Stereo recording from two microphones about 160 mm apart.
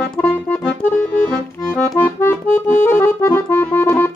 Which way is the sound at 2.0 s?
15° left (ahead or behind).